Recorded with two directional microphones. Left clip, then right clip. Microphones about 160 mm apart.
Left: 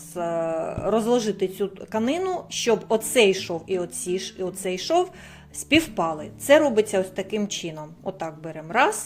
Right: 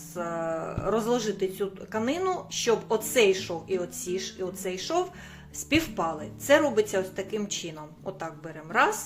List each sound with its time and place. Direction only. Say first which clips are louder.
0.1 s a woman's voice: left 5 dB; 30° left (ahead or behind)